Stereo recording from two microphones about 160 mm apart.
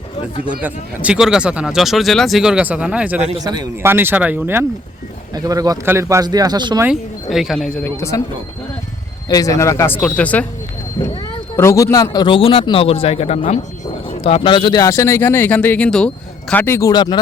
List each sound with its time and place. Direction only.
0.4 s speech: 10° right (ahead or behind)
5.3 s speech: 25° right (ahead or behind)
6.8 s speech: centre (ahead or behind)
9.3 s speech: 20° left (ahead or behind)
11.5 s a man's voice: 20° left (ahead or behind)